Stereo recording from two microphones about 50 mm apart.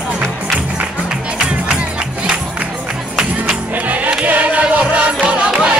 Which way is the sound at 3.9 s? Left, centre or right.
Right.